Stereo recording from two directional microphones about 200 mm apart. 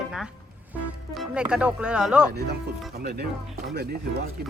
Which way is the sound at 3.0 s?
55° right (ahead or behind).